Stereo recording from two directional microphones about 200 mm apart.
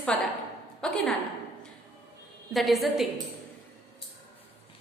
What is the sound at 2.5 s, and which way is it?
Speech, centre (ahead or behind).